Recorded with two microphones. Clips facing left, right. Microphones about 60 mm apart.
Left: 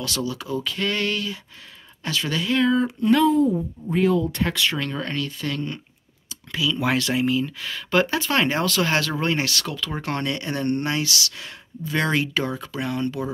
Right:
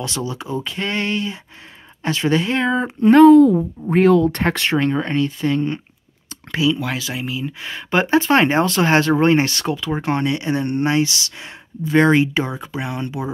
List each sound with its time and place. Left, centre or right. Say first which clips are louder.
0.0 s speech: right 2 dB; right
3.3 s speech: right 9 dB; right
3.9 s speech: right 7 dB; right
4.3 s speech: right 5 dB; right
6.9 s speech: left 4 dB; centre
7.4 s speech: right 3 dB; right